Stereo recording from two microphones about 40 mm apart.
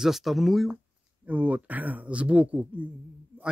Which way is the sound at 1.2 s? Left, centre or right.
Right.